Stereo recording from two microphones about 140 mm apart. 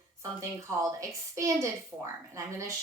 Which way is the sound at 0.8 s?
25° right (ahead or behind).